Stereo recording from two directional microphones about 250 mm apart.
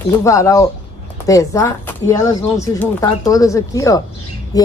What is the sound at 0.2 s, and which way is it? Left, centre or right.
Speech, centre.